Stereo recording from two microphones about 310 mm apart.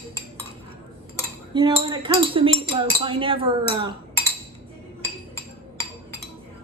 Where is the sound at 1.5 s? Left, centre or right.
Centre.